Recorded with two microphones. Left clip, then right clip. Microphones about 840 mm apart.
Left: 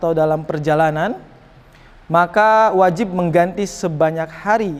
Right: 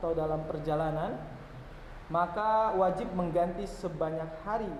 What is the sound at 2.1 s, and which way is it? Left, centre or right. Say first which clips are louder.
A man's voice: left 16 dB; left.